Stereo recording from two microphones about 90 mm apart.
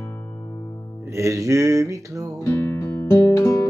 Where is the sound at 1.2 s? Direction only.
35° right (ahead or behind).